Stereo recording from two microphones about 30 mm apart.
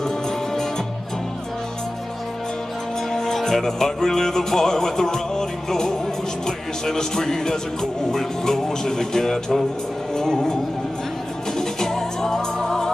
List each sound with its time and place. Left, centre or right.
3.1 s music: centre